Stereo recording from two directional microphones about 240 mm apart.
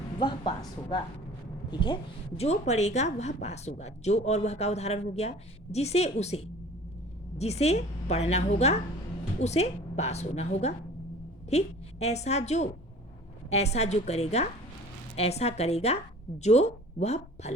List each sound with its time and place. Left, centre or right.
0.2 s a woman's voice: centre